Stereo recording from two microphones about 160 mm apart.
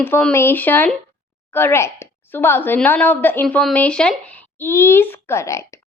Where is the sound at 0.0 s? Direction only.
10° left (ahead or behind).